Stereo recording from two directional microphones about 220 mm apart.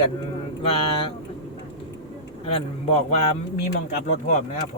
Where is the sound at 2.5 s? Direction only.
25° left (ahead or behind).